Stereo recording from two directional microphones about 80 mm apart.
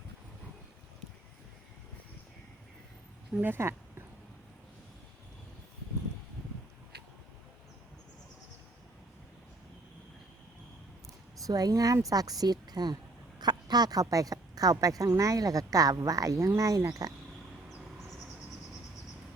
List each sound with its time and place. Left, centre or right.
3.4 s speech: right
11.4 s a woman's voice: right